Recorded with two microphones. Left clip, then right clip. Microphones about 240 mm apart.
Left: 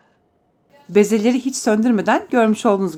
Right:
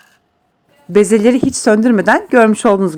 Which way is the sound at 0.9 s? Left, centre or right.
Right.